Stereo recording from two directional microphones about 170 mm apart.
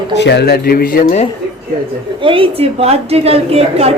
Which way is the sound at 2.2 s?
30° right (ahead or behind).